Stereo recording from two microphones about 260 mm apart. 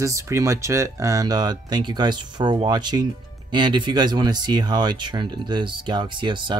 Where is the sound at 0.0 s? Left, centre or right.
Centre.